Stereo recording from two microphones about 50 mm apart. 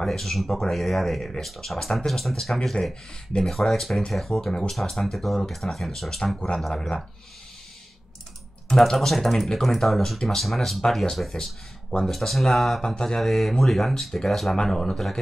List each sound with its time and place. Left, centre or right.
0.0 s speech: centre
8.6 s speech: centre
12.8 s speech: centre